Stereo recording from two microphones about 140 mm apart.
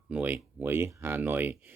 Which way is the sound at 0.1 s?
10° right (ahead or behind).